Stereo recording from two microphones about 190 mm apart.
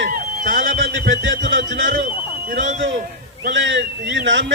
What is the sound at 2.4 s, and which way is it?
Speech, 40° right (ahead or behind).